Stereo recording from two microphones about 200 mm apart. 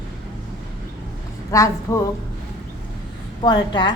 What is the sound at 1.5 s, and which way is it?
Speech, 15° left (ahead or behind).